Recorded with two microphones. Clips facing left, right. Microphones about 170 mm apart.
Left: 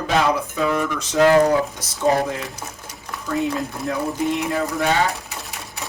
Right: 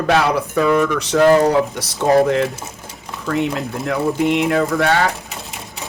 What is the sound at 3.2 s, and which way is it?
Speech, 70° right (ahead or behind).